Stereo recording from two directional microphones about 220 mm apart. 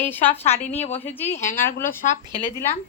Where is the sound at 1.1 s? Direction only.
10° left (ahead or behind).